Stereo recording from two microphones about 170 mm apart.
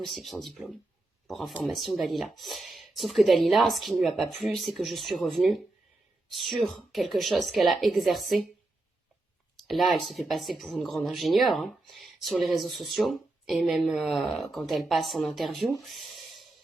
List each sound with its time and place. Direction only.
0.0 s speech: centre (ahead or behind)
9.6 s speech: centre (ahead or behind)
15.8 s a sound: centre (ahead or behind)